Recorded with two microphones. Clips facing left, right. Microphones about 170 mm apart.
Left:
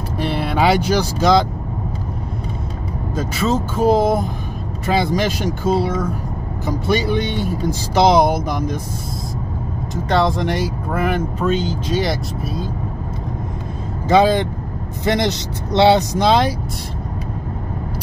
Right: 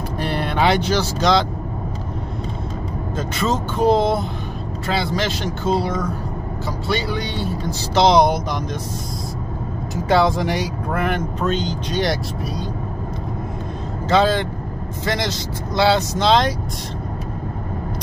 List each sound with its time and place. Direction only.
0.2 s speech: 5° left (ahead or behind)
3.2 s speech: 5° left (ahead or behind)
6.9 s speech: 20° left (ahead or behind)
10.0 s speech: centre (ahead or behind)
14.0 s speech: 15° left (ahead or behind)